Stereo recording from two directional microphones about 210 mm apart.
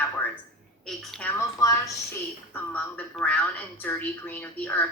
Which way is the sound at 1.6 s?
15° left (ahead or behind).